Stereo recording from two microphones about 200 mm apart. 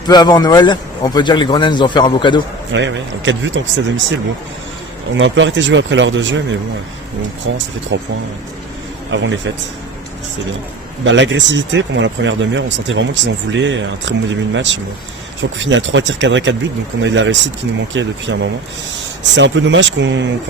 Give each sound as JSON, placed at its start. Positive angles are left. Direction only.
{"t": 0.1, "sound": "a man's voice", "side_deg": 20}
{"t": 2.7, "sound": "speech", "side_deg": -65}
{"t": 5.1, "sound": "speech", "side_deg": -65}
{"t": 7.9, "sound": "speech", "side_deg": -65}
{"t": 9.1, "sound": "speech", "side_deg": -65}
{"t": 11.0, "sound": "speech", "side_deg": -70}